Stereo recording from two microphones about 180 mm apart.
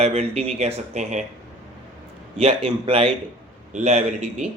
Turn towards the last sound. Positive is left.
turn(degrees=-40)  # may be behind; listen again after turning